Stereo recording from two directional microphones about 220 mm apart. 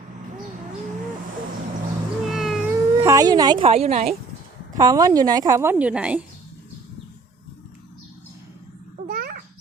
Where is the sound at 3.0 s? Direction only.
15° right (ahead or behind).